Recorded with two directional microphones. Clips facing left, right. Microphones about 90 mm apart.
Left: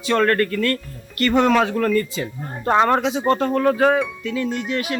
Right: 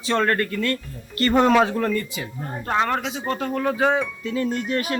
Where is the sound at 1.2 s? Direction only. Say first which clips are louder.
Left 1 dB; 30° right (ahead or behind).